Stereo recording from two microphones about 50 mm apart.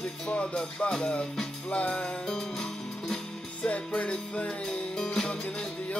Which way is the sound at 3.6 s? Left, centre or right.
Left.